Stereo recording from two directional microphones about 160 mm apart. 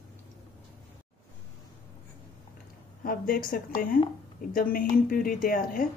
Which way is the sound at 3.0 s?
65° left (ahead or behind).